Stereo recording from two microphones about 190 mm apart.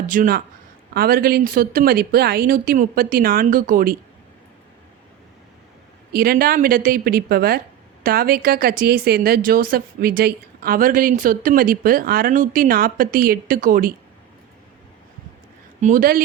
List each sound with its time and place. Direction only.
0.1 s speech: 50° right (ahead or behind)
6.1 s speech: 50° right (ahead or behind)
15.8 s speech: 45° right (ahead or behind)